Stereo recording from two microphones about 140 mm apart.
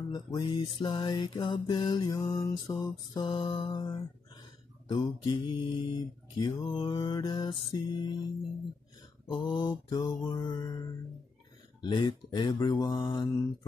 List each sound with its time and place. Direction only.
0.1 s mantra: 30° left (ahead or behind)
2.4 s music: 25° left (ahead or behind)
3.2 s mantra: 35° left (ahead or behind)
9.4 s mantra: 35° left (ahead or behind)
11.8 s mantra: 35° left (ahead or behind)